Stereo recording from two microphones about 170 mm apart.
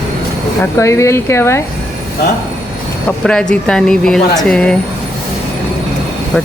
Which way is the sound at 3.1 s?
5° left (ahead or behind).